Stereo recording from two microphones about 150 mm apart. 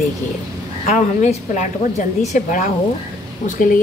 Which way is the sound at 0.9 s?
55° left (ahead or behind).